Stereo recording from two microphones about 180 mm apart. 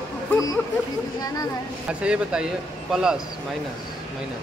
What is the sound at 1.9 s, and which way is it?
Speech, 5° right (ahead or behind).